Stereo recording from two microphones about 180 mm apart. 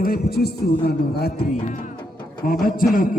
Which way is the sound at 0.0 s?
55° left (ahead or behind).